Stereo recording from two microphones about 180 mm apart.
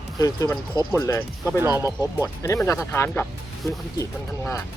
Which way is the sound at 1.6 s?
15° right (ahead or behind).